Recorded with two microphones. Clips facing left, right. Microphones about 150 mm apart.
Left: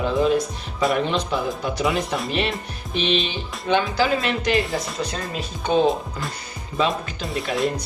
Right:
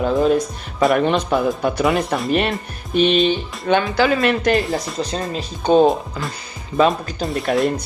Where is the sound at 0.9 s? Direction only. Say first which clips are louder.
Right 6 dB; 55° right (ahead or behind).